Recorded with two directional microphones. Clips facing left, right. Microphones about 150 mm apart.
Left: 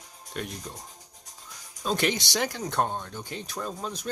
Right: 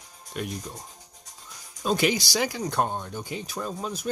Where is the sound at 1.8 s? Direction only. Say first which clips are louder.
Right 3 dB; 5° right (ahead or behind).